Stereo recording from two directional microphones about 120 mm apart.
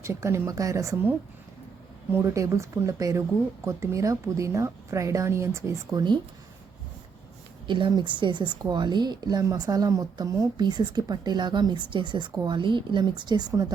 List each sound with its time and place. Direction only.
0.0 s a woman's voice: 25° right (ahead or behind)
2.1 s a woman's voice: 25° right (ahead or behind)
5.9 s speech: 35° right (ahead or behind)
7.7 s speech: 40° right (ahead or behind)